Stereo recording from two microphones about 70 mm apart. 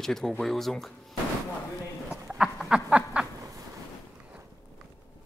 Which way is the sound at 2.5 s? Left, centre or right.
Centre.